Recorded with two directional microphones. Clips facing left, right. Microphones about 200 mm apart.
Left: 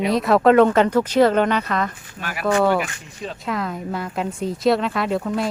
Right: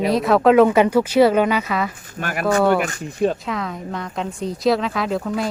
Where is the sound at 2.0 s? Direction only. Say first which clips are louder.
Right 2 dB; 50° right (ahead or behind).